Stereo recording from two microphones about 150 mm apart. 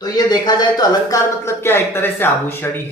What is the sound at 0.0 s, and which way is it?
Speech, 25° left (ahead or behind).